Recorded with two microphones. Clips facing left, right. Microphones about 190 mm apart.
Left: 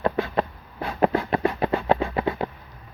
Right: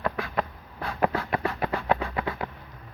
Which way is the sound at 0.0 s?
25° left (ahead or behind).